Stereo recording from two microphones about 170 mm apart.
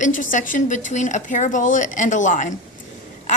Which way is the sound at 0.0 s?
50° left (ahead or behind).